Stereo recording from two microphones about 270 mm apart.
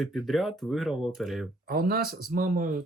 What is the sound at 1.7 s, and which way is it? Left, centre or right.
Speech, right.